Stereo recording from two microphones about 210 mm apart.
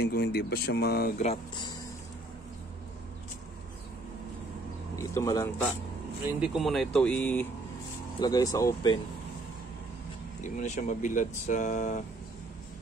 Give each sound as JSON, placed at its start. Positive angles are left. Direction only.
{"t": 0.0, "sound": "speech", "side_deg": 50}
{"t": 1.1, "sound": "speech", "side_deg": 30}
{"t": 4.9, "sound": "speech", "side_deg": 15}
{"t": 6.4, "sound": "speech", "side_deg": 0}
{"t": 8.2, "sound": "speech", "side_deg": 15}
{"t": 10.4, "sound": "speech", "side_deg": 35}